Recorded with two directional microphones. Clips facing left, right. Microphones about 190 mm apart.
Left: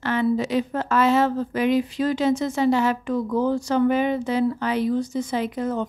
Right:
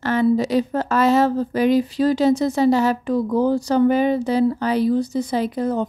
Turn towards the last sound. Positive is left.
turn(degrees=-35)  # may be behind; listen again after turning